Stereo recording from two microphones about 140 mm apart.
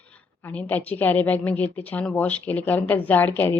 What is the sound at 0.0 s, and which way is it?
A woman's voice, 10° left (ahead or behind).